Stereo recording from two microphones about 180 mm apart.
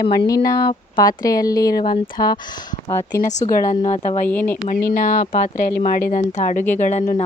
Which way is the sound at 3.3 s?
45° left (ahead or behind).